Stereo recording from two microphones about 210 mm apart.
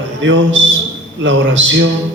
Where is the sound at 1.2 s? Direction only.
60° right (ahead or behind).